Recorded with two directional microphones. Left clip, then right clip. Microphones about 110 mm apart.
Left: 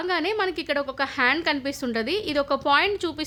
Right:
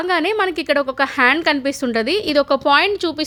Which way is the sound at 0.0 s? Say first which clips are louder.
Right 7 dB; 50° right (ahead or behind).